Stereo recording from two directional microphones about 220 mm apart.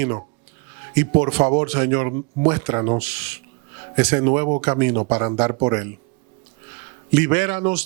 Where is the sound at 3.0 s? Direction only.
10° right (ahead or behind).